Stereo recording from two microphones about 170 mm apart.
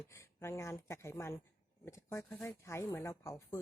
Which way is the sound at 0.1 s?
15° left (ahead or behind).